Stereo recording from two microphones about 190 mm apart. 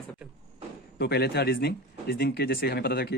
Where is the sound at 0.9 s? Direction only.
60° left (ahead or behind).